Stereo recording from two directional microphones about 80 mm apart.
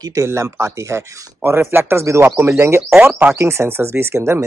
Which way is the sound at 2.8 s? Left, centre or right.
Centre.